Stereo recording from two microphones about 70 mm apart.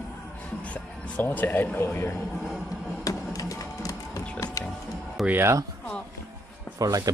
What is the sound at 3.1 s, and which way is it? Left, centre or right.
Music, left.